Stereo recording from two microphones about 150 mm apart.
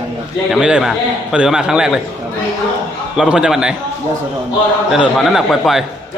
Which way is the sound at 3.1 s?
5° right (ahead or behind).